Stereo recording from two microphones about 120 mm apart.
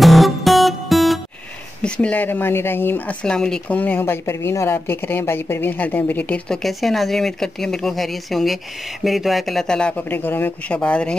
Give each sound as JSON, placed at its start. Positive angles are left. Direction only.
{"t": 0.0, "sound": "music", "side_deg": 0}
{"t": 1.8, "sound": "speech", "side_deg": 10}
{"t": 3.3, "sound": "speech", "side_deg": 5}
{"t": 6.6, "sound": "speech", "side_deg": 0}